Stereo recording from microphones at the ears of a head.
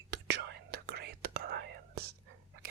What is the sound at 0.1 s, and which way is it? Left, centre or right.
Whispering, right.